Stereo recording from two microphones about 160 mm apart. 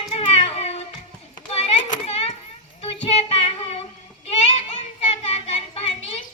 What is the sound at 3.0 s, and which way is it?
Child singing, 40° left (ahead or behind).